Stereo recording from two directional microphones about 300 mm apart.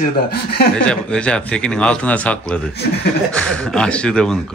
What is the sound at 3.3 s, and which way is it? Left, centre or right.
Speech, centre.